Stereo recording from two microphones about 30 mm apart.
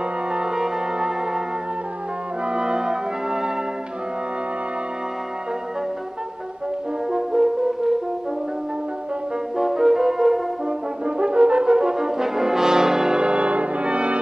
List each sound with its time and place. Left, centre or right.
0.3 s music: right
2.4 s brass instrument: right
7.1 s french horn: centre
9.6 s music: centre
10.7 s french horn: right
12.0 s brass instrument: centre
13.2 s brass instrument: right